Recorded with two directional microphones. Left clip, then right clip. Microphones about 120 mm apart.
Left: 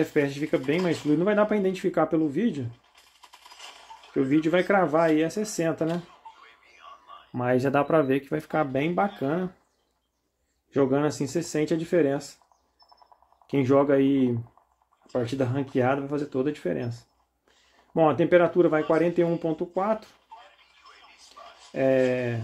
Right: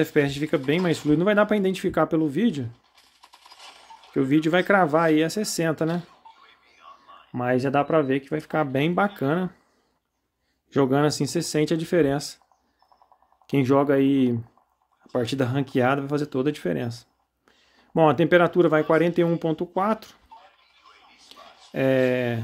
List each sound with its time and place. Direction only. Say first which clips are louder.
0.0 s speech: right 3 dB; 40° right (ahead or behind)
4.1 s speech: right 2 dB; 40° right (ahead or behind)
7.3 s speech: right 1 dB; 20° right (ahead or behind)
8.5 s speech: right 2 dB; 40° right (ahead or behind)
10.7 s speech: right 2 dB; 45° right (ahead or behind)
13.5 s speech: right 1 dB; 35° right (ahead or behind)
15.0 s speech: right 2 dB; 45° right (ahead or behind)
21.3 s a sound: right 2 dB; 50° right (ahead or behind)